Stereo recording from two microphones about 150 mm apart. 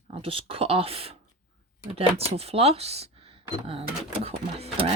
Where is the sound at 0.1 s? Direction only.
35° right (ahead or behind).